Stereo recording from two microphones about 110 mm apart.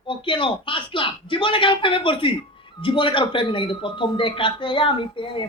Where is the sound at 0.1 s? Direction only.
50° left (ahead or behind).